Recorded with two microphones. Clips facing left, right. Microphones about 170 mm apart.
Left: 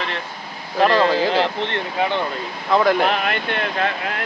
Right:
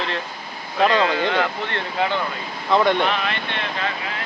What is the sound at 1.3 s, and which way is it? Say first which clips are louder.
Speech: left 3 dB; 30° left (ahead or behind).